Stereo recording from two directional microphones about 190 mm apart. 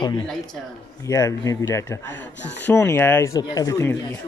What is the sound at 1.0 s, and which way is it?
Speech, 15° left (ahead or behind).